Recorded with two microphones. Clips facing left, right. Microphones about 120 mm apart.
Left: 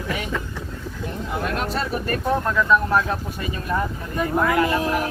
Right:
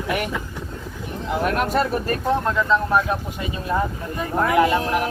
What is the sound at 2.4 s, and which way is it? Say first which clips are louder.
Speech: left 1 dB; 20° right (ahead or behind).